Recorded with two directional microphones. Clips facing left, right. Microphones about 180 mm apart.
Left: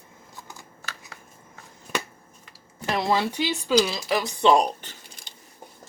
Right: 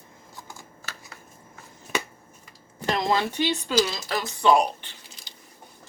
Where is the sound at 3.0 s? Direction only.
10° left (ahead or behind).